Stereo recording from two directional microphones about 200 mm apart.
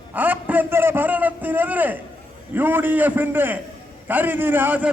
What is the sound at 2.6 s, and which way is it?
A man's voice, 10° right (ahead or behind).